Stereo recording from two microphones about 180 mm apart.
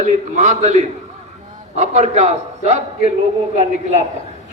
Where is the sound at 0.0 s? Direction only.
40° right (ahead or behind).